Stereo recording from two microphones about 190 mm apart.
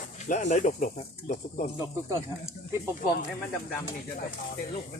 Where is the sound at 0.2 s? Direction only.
40° left (ahead or behind).